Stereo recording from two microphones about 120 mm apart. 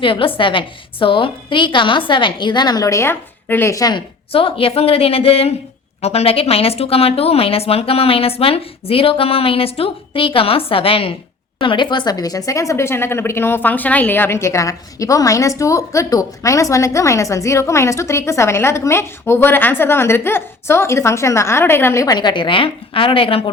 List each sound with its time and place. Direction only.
0.0 s speech: 45° left (ahead or behind); by 4.0 s 30° left (ahead or behind)
4.3 s a woman's voice: 50° left (ahead or behind)